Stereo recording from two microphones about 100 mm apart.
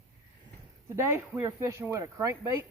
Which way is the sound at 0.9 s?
25° right (ahead or behind).